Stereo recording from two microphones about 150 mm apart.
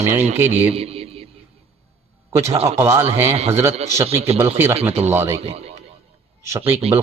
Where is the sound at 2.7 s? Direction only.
20° right (ahead or behind).